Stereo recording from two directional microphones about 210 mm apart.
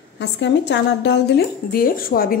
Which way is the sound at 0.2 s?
55° left (ahead or behind).